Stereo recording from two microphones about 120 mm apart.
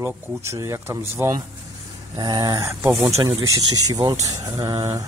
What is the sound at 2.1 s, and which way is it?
Speech, 35° right (ahead or behind).